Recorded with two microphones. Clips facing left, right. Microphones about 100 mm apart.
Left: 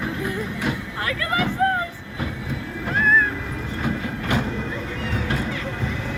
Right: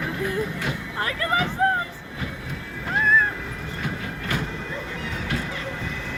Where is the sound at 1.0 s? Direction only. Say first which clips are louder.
Even; 30° right (ahead or behind).